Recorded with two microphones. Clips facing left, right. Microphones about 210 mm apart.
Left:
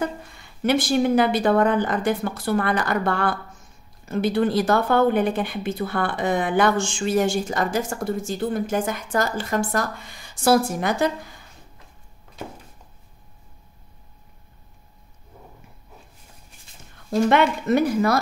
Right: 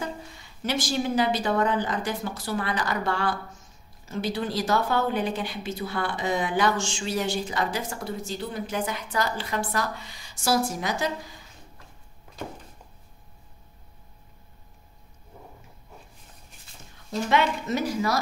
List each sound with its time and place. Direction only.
0.0 s speech: 55° left (ahead or behind)
17.1 s speech: 55° left (ahead or behind)